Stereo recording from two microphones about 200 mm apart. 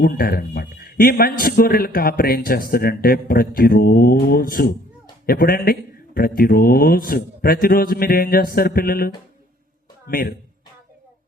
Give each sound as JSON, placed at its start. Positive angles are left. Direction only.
{"t": 0.0, "sound": "a man's voice", "side_deg": 50}